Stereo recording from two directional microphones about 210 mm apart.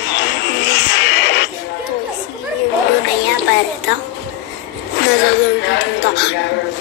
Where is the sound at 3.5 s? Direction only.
55° left (ahead or behind).